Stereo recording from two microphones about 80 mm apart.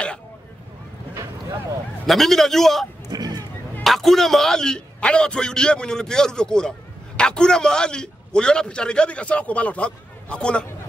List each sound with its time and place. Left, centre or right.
2.0 s a man's voice: centre
3.1 s a sound: right
3.8 s a man's voice: centre